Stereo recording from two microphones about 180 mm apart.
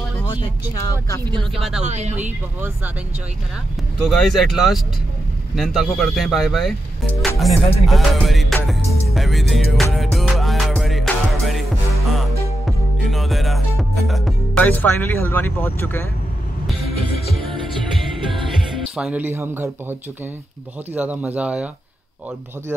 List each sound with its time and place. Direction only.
0.3 s speech: 20° left (ahead or behind)
1.8 s speech: 40° right (ahead or behind)
4.0 s speech: centre (ahead or behind)
9.9 s music: centre (ahead or behind)
17.3 s music: centre (ahead or behind)
18.9 s speech: 5° right (ahead or behind)